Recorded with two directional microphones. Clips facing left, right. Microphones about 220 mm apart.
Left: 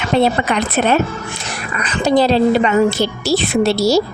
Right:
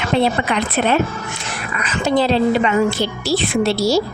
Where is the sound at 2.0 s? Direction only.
40° left (ahead or behind).